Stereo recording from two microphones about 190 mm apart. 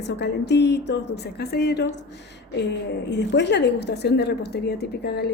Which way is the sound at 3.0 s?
65° left (ahead or behind).